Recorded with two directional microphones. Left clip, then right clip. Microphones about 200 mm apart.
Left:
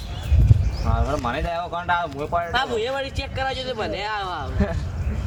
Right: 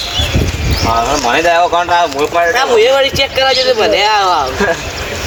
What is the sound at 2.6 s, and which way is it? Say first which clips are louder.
Speech: right 15 dB; 10° right (ahead or behind).